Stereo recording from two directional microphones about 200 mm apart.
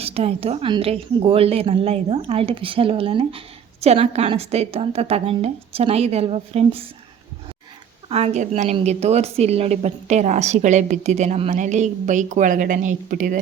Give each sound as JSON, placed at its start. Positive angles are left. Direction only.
{"t": 0.0, "sound": "a woman's voice", "side_deg": -30}
{"t": 8.1, "sound": "a woman's voice", "side_deg": -35}